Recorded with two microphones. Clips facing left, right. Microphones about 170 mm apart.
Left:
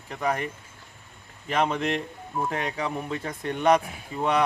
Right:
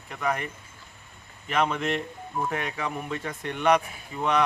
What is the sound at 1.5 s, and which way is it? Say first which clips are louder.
Speech: left 1 dB; 30° left (ahead or behind).